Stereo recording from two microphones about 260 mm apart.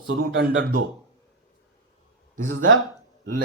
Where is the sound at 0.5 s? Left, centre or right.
Right.